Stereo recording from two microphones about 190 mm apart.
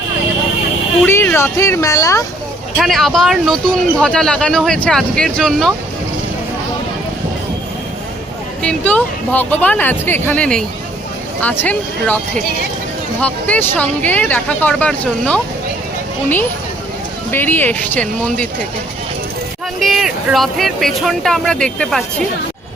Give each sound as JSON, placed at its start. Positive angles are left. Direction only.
{"t": 1.0, "sound": "speech", "side_deg": 10}
{"t": 2.7, "sound": "speech", "side_deg": 0}
{"t": 8.6, "sound": "speech", "side_deg": 5}
{"t": 13.2, "sound": "speech", "side_deg": 5}
{"t": 17.3, "sound": "speech", "side_deg": 10}
{"t": 19.8, "sound": "speech", "side_deg": 0}